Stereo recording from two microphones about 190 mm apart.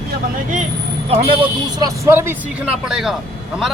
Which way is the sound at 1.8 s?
15° right (ahead or behind).